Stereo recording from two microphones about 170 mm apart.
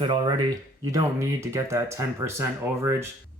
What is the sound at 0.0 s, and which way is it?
Speech, 25° right (ahead or behind).